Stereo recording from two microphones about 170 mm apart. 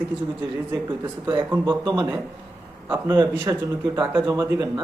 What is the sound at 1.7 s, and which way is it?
Speech, 25° right (ahead or behind).